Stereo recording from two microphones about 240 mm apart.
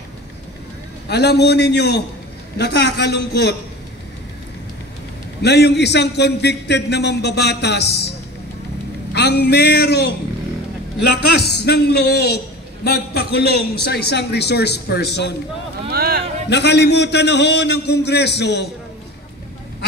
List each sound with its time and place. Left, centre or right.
1.0 s a man's voice: left
5.4 s a man's voice: left
9.1 s a man's voice: left
11.3 s a man's voice: left
15.9 s speech: right
16.4 s a man's voice: left